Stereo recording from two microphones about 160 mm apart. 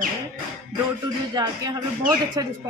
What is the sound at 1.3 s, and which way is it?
Speech, 25° right (ahead or behind).